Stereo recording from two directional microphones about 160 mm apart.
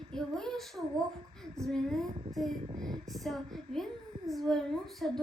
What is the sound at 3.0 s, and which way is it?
A woman's voice, centre (ahead or behind).